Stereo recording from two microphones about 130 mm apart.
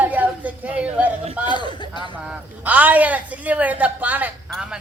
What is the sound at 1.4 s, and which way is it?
Speech, 35° left (ahead or behind).